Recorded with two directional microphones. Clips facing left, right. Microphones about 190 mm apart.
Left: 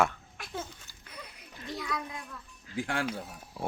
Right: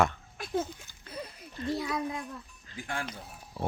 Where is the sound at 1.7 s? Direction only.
25° right (ahead or behind).